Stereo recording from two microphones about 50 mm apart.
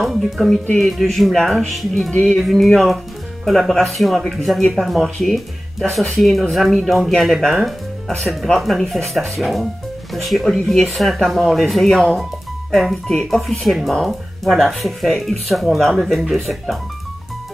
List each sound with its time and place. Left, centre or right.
0.0 s speech: centre
2.1 s speech: left
2.4 s speech: centre
10.6 s speech: centre
10.9 s speech: centre